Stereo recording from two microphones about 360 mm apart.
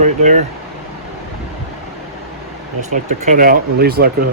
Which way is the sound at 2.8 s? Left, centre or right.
Centre.